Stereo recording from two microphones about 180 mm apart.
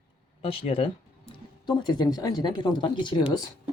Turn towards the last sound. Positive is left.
turn(degrees=25)  # may be behind; listen again after turning